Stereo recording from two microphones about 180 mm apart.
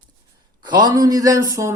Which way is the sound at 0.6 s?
25° right (ahead or behind).